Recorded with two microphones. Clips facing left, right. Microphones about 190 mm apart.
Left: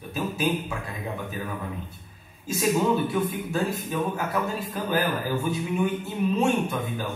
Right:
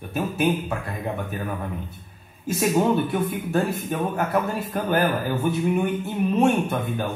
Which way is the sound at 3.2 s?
60° right (ahead or behind).